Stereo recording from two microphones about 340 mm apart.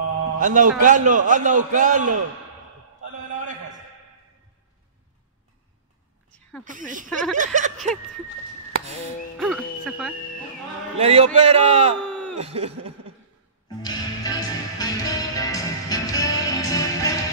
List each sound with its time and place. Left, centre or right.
0.2 s a man's voice: right
6.6 s a man's voice: right
9.4 s music: centre
11.0 s a man's voice: centre
13.8 s music: centre